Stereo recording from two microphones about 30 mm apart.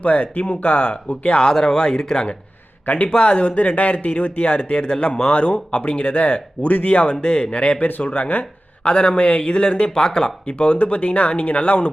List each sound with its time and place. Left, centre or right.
0.0 s speech: left
1.7 s speech: left
2.8 s a man's voice: left
3.1 s speech: left
7.0 s speech: left
7.5 s speech: left
7.8 s speech: left
8.1 s speech: left
8.8 s speech: left
9.9 s speech: left
10.4 s speech: left